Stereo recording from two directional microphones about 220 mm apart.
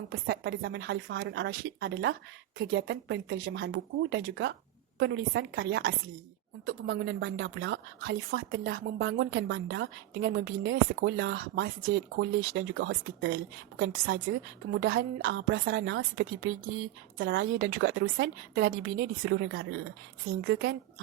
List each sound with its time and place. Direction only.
0.1 s a woman's voice: 50° right (ahead or behind)
14.8 s a woman's voice: 45° right (ahead or behind)
15.2 s a woman's voice: 55° right (ahead or behind)